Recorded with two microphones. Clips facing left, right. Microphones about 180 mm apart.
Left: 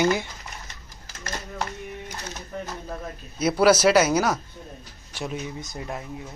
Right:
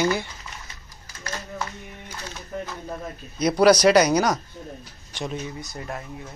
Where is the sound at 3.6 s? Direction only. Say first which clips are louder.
Right 2 dB; 5° left (ahead or behind).